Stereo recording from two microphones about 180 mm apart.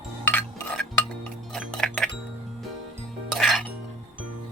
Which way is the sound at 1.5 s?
5° left (ahead or behind).